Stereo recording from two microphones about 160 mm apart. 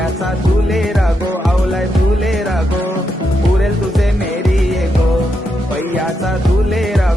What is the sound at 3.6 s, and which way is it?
Music, centre (ahead or behind).